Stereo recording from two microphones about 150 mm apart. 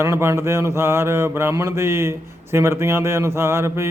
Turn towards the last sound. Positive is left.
turn(degrees=-15)  # may be behind; listen again after turning